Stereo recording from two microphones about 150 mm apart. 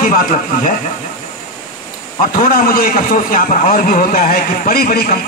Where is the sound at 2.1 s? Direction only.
70° left (ahead or behind).